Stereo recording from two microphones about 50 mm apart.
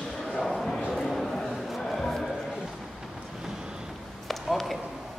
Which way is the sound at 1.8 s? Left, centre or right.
Centre.